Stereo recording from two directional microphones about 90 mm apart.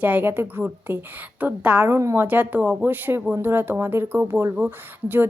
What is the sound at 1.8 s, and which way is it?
Speech, 30° right (ahead or behind).